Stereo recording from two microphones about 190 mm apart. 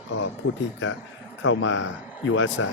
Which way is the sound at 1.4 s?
90° left.